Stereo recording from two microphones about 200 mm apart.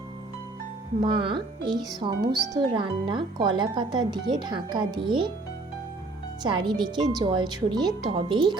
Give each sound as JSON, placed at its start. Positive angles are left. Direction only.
{"t": 1.0, "sound": "speech", "side_deg": -25}
{"t": 6.4, "sound": "speech", "side_deg": -25}